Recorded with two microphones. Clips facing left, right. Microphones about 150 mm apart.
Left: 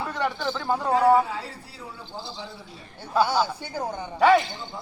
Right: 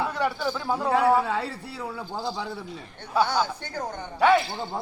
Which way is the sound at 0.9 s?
65° right (ahead or behind).